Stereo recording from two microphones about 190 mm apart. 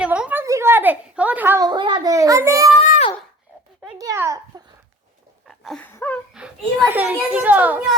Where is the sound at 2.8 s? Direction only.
40° left (ahead or behind).